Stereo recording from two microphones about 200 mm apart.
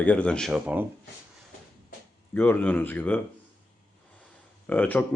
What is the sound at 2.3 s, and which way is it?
Speech, 10° left (ahead or behind).